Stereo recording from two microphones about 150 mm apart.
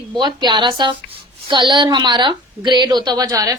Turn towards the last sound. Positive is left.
turn(degrees=-25)  # may be behind; listen again after turning